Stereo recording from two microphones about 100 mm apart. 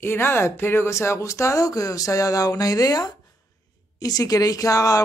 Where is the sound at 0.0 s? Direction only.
20° left (ahead or behind).